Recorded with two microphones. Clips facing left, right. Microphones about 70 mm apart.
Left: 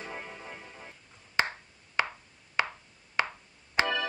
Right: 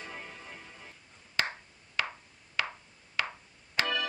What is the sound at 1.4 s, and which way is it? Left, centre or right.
Ping, left.